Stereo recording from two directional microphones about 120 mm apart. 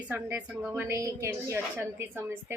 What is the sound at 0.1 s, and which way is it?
A woman's voice, 15° right (ahead or behind).